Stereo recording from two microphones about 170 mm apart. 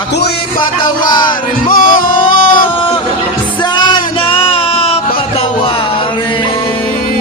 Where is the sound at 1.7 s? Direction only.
55° left (ahead or behind).